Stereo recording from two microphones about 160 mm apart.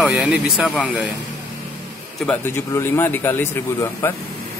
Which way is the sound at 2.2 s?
15° left (ahead or behind).